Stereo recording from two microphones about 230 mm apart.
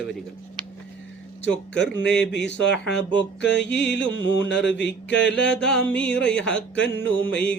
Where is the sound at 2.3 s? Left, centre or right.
Left.